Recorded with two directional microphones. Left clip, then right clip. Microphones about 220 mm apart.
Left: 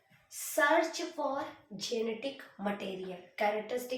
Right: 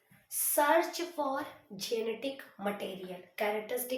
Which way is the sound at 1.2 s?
50° right (ahead or behind).